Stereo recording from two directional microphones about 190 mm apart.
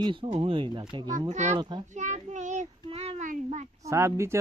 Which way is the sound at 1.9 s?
40° right (ahead or behind).